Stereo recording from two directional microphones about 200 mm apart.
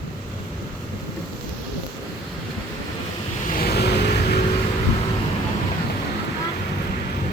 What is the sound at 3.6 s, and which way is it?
Vehicle, 55° left (ahead or behind).